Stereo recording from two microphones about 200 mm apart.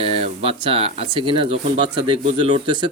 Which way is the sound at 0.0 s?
30° right (ahead or behind).